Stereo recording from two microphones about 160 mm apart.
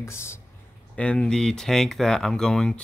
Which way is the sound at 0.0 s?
15° left (ahead or behind).